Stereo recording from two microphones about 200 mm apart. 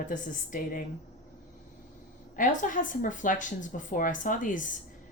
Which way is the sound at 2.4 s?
40° left (ahead or behind).